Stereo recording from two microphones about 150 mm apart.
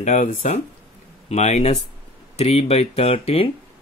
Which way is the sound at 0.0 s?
55° left (ahead or behind).